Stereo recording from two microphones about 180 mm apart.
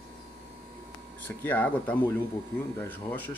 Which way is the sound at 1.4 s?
10° left (ahead or behind).